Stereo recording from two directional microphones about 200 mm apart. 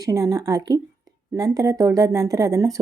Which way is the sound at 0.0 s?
15° right (ahead or behind).